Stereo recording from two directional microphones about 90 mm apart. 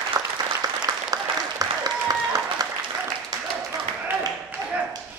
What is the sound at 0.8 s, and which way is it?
Applause, 45° right (ahead or behind).